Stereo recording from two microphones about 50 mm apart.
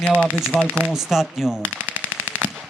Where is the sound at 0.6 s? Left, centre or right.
Right.